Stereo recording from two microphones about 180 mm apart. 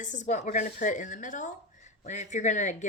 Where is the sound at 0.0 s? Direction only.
40° left (ahead or behind).